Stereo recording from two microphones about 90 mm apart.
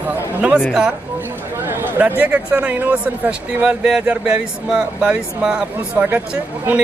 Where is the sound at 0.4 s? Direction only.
15° right (ahead or behind).